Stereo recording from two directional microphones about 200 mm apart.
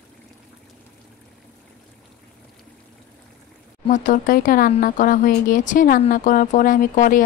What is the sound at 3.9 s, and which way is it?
A woman's voice, 40° left (ahead or behind).